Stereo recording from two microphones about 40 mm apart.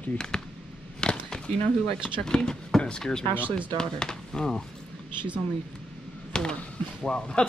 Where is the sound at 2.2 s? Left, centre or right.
Centre.